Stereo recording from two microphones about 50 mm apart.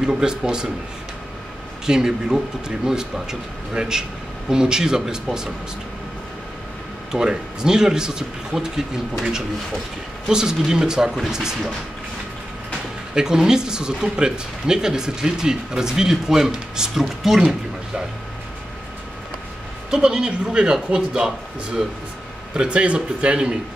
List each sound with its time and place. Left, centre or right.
0.0 s speech: centre
1.9 s speech: centre
7.1 s speech: centre
10.2 s speech: centre
13.1 s speech: centre
19.9 s speech: centre
22.5 s a man's voice: centre